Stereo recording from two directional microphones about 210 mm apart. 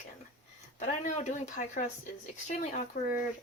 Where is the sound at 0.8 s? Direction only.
35° left (ahead or behind).